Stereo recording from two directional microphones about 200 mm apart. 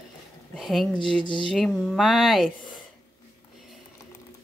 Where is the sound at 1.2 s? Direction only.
25° left (ahead or behind).